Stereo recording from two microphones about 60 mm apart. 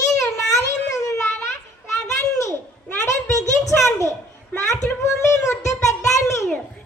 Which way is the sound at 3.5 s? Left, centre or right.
Left.